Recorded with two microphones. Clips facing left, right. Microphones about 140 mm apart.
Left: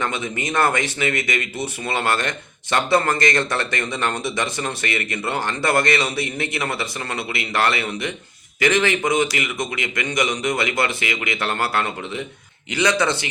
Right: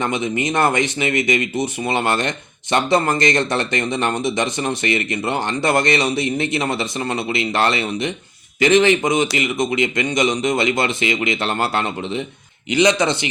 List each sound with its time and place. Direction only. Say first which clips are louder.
0.0 s speech: right 5 dB; 20° right (ahead or behind)